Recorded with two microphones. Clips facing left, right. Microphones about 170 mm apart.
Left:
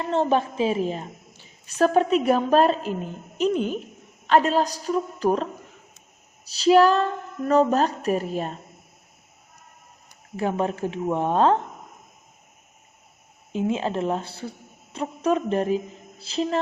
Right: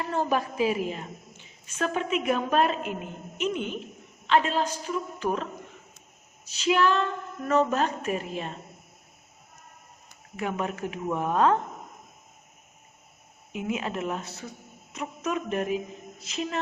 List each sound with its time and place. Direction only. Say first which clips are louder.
0.0 s a woman's voice: left 5 dB; 25° left (ahead or behind); by 8.5 s 40° left (ahead or behind)
10.3 s speech: left 6 dB; 30° left (ahead or behind)
13.5 s a woman's voice: left 6 dB; 30° left (ahead or behind)